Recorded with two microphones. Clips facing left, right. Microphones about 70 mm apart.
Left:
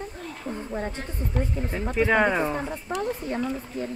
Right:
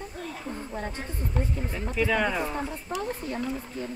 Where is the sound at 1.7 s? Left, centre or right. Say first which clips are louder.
Left 5 dB; left.